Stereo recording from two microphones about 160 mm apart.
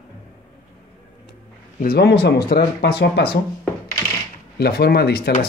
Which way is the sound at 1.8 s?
80° left.